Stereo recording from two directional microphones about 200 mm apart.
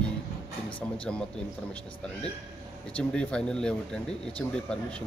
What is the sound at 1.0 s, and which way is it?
Speech, 5° left (ahead or behind).